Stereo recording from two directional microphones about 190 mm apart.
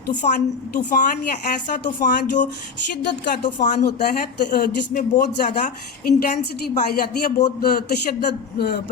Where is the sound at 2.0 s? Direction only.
40° left (ahead or behind).